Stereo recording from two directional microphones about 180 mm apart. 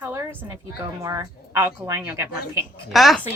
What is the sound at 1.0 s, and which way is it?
A woman's voice, 15° right (ahead or behind).